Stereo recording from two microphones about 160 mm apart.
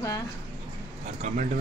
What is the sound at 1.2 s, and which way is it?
Speech, 45° right (ahead or behind).